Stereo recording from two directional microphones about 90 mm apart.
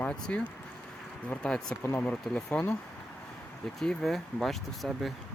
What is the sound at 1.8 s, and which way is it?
Speech, 25° left (ahead or behind).